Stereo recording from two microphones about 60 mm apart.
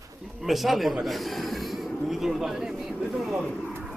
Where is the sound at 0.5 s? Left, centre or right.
Centre.